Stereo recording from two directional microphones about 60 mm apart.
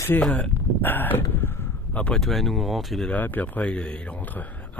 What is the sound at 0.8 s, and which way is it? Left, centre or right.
Speech, left.